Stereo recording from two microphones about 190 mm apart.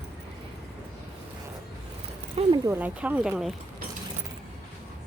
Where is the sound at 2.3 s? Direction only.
30° right (ahead or behind).